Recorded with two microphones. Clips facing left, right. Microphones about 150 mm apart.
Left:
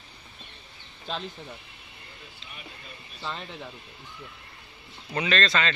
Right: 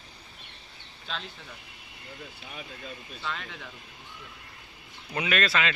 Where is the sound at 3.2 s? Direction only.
30° left (ahead or behind).